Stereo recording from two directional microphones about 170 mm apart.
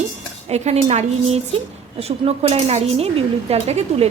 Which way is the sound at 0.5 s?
40° right (ahead or behind).